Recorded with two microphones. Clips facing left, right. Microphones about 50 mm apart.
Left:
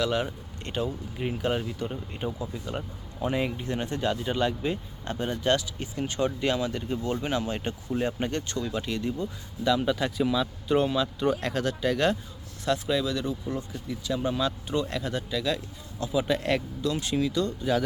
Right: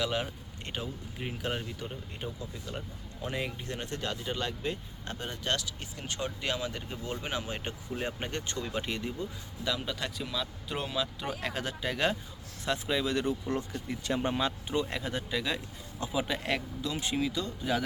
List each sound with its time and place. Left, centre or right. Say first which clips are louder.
0.0 s speech: left 5 dB; centre
1.2 s speech: left 7 dB; centre
2.2 s speech: left 7 dB; centre
8.5 s speech: left 4 dB; right
9.6 s speech: left 9 dB; centre
13.1 s speech: even; right
14.7 s speech: left 3 dB; centre
16.2 s speech: left 6 dB; centre